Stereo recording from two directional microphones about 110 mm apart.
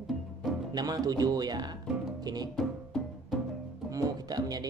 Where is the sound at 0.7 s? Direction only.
35° right (ahead or behind).